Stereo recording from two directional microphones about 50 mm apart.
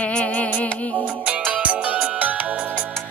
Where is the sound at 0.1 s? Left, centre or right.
Left.